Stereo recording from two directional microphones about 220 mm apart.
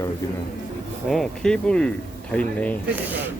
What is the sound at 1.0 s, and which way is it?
Speech, 5° left (ahead or behind).